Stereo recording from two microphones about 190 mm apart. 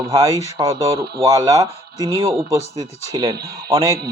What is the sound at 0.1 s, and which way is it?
Speech, 15° right (ahead or behind).